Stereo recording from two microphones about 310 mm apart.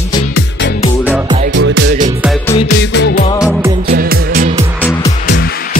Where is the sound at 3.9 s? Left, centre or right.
Right.